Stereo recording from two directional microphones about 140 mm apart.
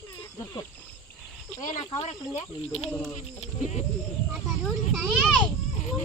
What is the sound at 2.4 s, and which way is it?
Speech, 50° left (ahead or behind).